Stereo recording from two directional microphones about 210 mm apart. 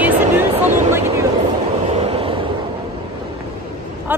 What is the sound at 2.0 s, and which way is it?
Vehicle, 30° right (ahead or behind).